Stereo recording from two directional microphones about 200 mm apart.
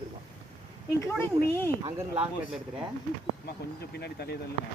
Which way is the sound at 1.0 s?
10° left (ahead or behind).